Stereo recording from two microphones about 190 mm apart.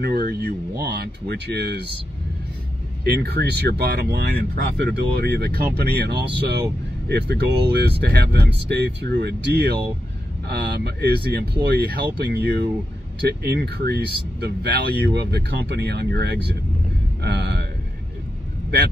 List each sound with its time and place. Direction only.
0.0 s speech: 55° right (ahead or behind)
3.0 s speech: 55° right (ahead or behind)
17.2 s a sound: 60° right (ahead or behind)